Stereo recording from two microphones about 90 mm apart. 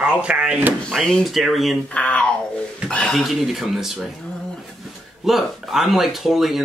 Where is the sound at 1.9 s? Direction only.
15° left (ahead or behind).